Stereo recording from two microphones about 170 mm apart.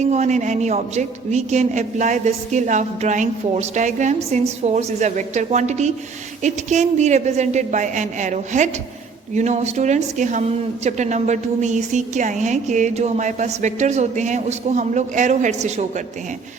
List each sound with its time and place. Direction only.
0.0 s a woman's voice: 45° right (ahead or behind)